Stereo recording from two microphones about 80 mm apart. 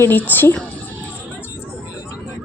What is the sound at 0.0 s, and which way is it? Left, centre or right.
Speech, left.